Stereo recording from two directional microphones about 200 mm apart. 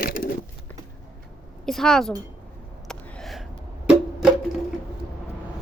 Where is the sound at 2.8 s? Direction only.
5° left (ahead or behind).